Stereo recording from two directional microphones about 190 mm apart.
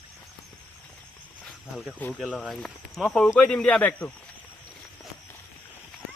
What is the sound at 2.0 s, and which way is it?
Speech, 5° left (ahead or behind).